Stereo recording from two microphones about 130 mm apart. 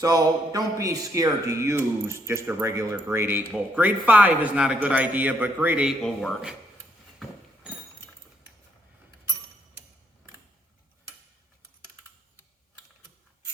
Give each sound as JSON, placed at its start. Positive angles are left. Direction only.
{"t": 0.0, "sound": "speech", "side_deg": -30}